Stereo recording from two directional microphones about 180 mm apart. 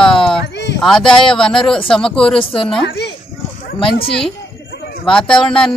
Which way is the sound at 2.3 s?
30° left (ahead or behind).